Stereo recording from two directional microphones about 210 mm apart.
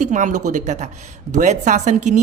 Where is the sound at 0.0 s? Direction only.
35° right (ahead or behind).